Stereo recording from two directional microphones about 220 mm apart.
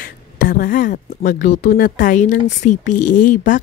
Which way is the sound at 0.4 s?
40° left (ahead or behind).